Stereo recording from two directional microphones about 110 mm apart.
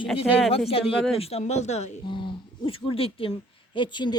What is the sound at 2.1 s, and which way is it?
Speech, 50° left (ahead or behind).